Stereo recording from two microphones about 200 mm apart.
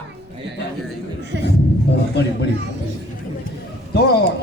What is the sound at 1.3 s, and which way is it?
Speech, 60° right (ahead or behind).